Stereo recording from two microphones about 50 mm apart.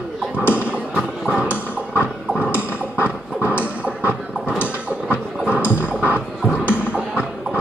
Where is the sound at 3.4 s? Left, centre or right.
Right.